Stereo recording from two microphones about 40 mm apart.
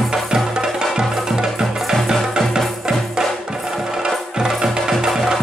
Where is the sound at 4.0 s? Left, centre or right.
Centre.